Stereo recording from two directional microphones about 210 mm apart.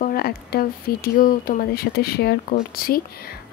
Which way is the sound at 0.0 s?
45° left (ahead or behind).